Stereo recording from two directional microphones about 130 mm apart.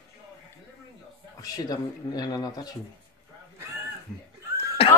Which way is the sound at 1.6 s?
30° left (ahead or behind).